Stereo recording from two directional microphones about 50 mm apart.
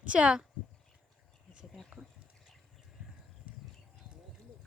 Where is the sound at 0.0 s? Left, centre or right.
Right.